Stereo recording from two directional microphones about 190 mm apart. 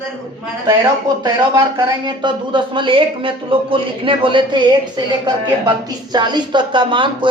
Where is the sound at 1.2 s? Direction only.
20° right (ahead or behind).